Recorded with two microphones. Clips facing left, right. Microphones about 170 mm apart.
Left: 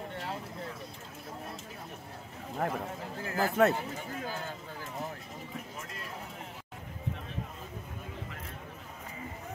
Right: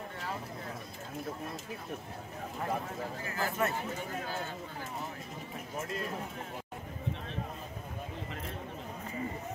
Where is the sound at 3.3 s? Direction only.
60° left (ahead or behind).